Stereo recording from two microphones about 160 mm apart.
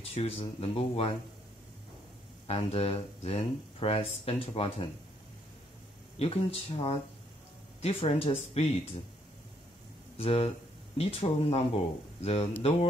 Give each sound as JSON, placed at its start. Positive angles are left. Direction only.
{"t": 0.1, "sound": "speech", "side_deg": 40}
{"t": 2.4, "sound": "speech", "side_deg": 40}
{"t": 6.1, "sound": "speech", "side_deg": 40}
{"t": 10.1, "sound": "speech", "side_deg": 40}